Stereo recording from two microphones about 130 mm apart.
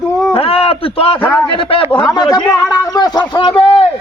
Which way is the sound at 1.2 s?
15° left (ahead or behind).